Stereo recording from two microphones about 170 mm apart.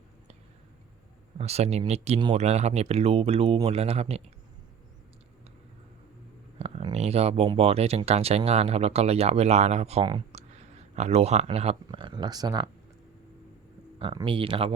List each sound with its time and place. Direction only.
1.4 s speech: 40° right (ahead or behind)
6.6 s speech: 35° right (ahead or behind)
14.0 s speech: 30° right (ahead or behind)